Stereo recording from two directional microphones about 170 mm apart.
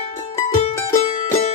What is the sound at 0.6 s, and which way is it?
Music, 35° left (ahead or behind).